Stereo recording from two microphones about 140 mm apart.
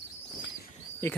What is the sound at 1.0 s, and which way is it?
Speech, 20° left (ahead or behind).